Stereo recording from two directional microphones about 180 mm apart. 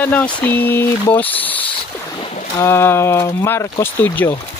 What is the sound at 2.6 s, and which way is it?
Speech, 15° left (ahead or behind).